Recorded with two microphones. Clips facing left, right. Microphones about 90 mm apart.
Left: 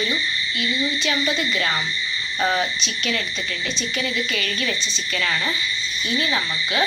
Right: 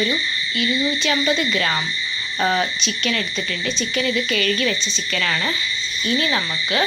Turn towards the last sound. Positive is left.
turn(degrees=10)  # may be behind; listen again after turning